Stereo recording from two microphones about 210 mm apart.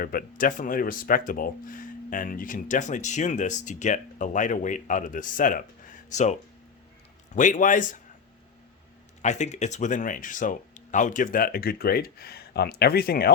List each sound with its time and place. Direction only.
0.0 s speech: 45° left (ahead or behind)
9.2 s speech: 35° left (ahead or behind)